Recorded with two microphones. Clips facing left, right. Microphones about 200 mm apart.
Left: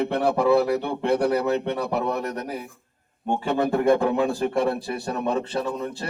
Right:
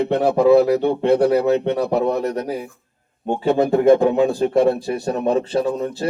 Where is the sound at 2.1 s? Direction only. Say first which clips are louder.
Right 6 dB; 30° right (ahead or behind).